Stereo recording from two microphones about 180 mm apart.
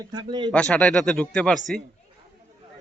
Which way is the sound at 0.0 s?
25° right (ahead or behind).